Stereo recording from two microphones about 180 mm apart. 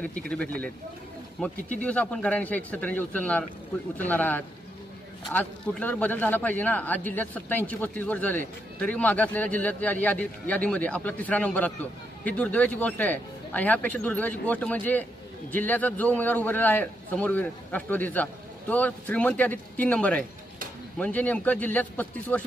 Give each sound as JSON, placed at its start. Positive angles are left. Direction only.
{"t": 1.4, "sound": "a man's voice", "side_deg": 5}